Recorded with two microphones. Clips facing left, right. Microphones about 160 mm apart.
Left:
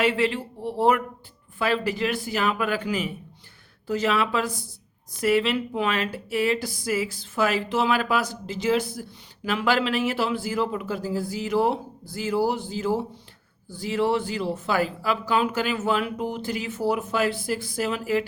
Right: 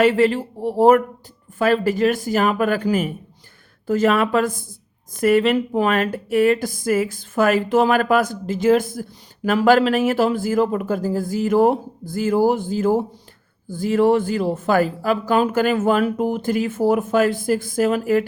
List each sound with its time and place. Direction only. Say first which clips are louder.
0.0 s speech: right 7 dB; 45° right (ahead or behind)